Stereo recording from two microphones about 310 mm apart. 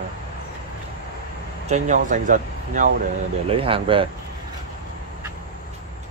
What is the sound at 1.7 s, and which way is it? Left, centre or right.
Speech, right.